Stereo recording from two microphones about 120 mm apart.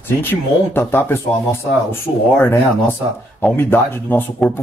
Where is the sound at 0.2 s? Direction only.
15° left (ahead or behind).